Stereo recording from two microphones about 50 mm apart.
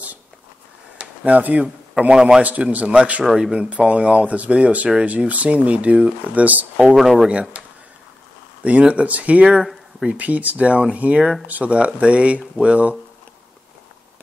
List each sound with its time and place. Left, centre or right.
0.9 s a sound: right
2.1 s a man's voice: centre
2.4 s speech: right
7.0 s speech: centre
7.2 s speech: right
8.6 s speech: right
9.6 s a sound: centre
10.0 s speech: right